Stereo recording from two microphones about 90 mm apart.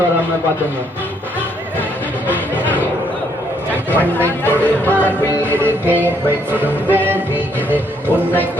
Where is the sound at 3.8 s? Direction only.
20° left (ahead or behind).